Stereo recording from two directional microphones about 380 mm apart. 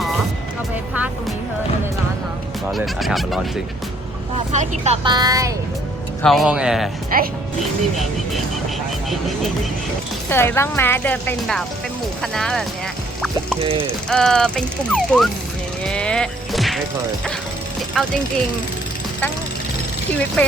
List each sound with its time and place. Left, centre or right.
2.7 s speech: centre
4.5 s a woman's voice: centre
7.1 s speech: right
7.6 s speech: centre
10.2 s speech: centre
14.1 s speech: centre
15.8 s a sound: centre
18.0 s speech: centre
20.1 s speech: centre